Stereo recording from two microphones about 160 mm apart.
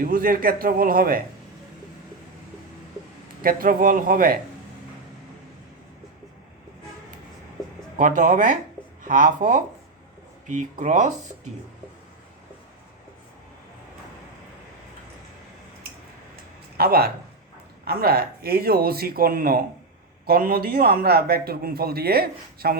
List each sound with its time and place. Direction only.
0.0 s a man's voice: 65° right (ahead or behind)
3.4 s a man's voice: 60° right (ahead or behind)
7.9 s a man's voice: 55° right (ahead or behind)
16.3 s a sound: 75° right (ahead or behind)
17.8 s a man's voice: 75° right (ahead or behind)